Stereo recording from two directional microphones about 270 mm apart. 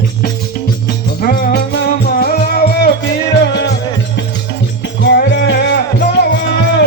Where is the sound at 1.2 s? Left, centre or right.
Left.